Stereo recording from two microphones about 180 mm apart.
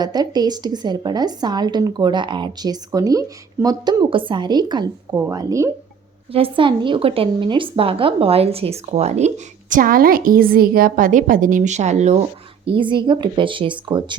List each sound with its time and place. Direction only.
0.0 s a woman's voice: 20° right (ahead or behind)
6.3 s speech: 30° right (ahead or behind)
12.6 s a woman's voice: 30° right (ahead or behind)